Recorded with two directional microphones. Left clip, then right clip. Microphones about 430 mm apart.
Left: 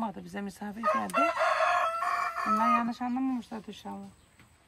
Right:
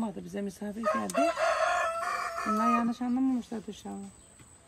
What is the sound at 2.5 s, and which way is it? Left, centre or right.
Speech, centre.